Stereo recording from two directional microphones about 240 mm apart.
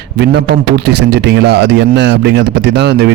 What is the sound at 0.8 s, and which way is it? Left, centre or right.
Speech, right.